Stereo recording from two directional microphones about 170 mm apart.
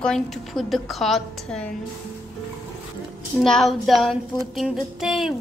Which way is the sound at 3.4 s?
Centre (ahead or behind).